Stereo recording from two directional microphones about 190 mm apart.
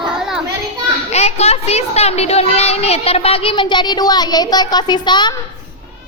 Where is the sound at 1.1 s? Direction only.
35° left (ahead or behind).